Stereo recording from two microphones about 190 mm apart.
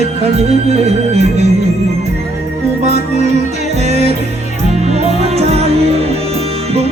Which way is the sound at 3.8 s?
35° right (ahead or behind).